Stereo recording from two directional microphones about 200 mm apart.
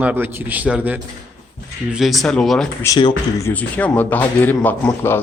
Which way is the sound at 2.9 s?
20° left (ahead or behind).